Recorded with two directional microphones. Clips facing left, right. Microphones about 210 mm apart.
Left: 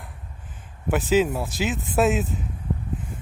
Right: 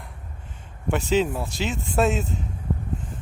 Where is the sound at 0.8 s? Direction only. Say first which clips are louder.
Left 2 dB; 5° left (ahead or behind).